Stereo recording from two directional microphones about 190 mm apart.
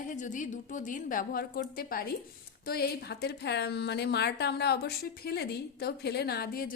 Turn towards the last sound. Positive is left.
turn(degrees=55)  # may be behind; listen again after turning